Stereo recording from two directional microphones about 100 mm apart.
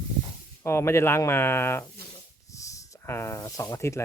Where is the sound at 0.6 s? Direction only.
25° left (ahead or behind).